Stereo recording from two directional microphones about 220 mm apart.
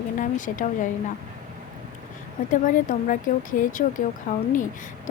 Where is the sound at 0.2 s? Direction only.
35° left (ahead or behind).